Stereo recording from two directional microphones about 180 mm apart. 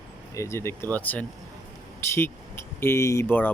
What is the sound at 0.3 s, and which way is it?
Speech, 15° left (ahead or behind).